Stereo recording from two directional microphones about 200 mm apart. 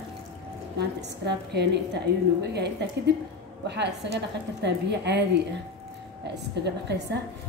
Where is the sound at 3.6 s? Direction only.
60° right (ahead or behind).